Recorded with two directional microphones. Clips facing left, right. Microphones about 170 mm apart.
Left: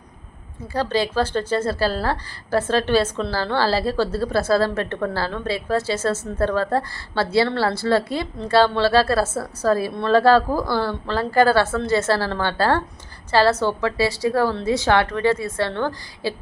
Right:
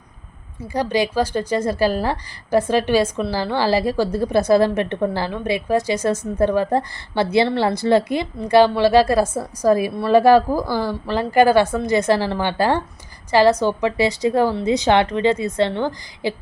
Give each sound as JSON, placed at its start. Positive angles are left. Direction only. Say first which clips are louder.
{"t": 0.7, "sound": "a woman's voice", "louder": "right 2 dB", "side_deg": -15}